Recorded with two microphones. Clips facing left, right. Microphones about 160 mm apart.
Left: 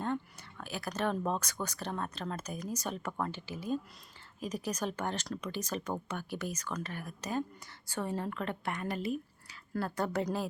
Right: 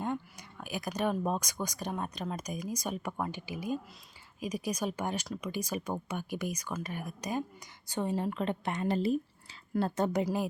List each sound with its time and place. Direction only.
0.0 s speech: 15° right (ahead or behind)